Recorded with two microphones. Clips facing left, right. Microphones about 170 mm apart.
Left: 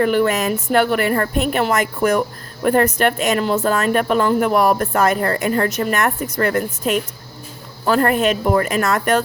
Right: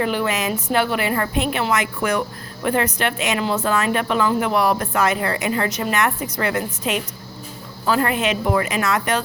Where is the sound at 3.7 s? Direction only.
45° left (ahead or behind).